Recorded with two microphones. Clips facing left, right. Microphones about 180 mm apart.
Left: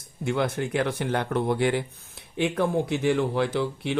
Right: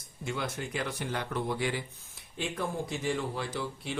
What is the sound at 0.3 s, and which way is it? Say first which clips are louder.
A man's voice: left 9 dB; 60° left (ahead or behind).